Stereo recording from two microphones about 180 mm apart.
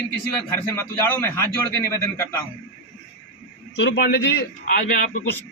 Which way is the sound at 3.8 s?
75° left (ahead or behind).